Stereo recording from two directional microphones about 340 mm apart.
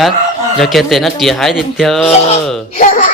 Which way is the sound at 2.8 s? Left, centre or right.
Left.